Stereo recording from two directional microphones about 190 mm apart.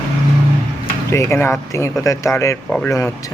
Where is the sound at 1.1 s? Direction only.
15° left (ahead or behind).